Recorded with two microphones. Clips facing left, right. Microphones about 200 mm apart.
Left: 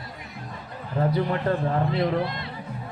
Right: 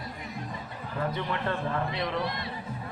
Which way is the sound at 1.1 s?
35° left (ahead or behind).